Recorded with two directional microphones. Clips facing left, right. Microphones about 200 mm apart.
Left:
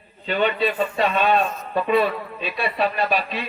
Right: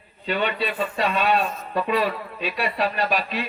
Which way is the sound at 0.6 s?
35° left (ahead or behind).